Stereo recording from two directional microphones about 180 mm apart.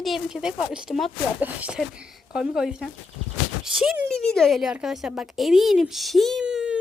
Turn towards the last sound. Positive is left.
turn(degrees=-5)  # may be behind; listen again after turning